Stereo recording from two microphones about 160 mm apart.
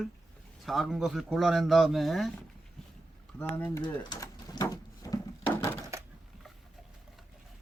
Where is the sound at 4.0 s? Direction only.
25° left (ahead or behind).